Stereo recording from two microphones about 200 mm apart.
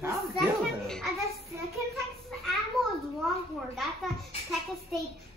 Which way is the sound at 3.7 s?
Centre (ahead or behind).